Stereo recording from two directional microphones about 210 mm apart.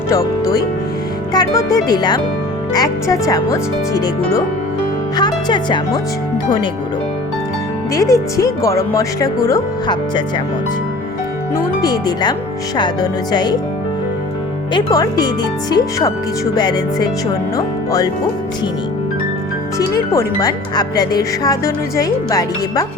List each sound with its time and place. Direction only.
0.1 s speech: 15° left (ahead or behind)
7.9 s speech: 15° left (ahead or behind)
11.5 s speech: 20° left (ahead or behind)
14.7 s speech: 20° left (ahead or behind)
20.1 s speech: 20° left (ahead or behind)